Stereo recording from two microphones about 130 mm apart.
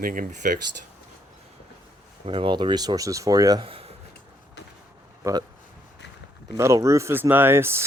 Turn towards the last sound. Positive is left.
turn(degrees=-20)  # may be behind; listen again after turning